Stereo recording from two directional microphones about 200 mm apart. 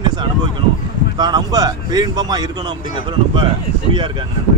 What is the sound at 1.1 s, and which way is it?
Speech, 20° right (ahead or behind).